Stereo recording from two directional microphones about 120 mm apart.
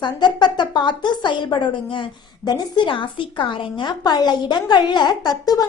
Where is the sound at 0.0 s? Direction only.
40° left (ahead or behind).